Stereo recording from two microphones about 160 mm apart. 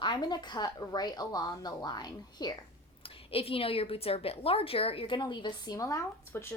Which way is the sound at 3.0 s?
35° left (ahead or behind).